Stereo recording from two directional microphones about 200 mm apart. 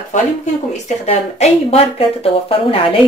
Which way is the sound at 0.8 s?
30° left (ahead or behind).